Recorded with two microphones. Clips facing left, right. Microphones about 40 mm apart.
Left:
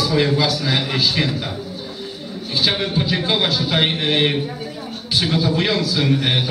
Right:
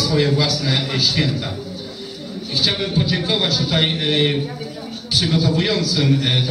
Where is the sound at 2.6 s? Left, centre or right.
Centre.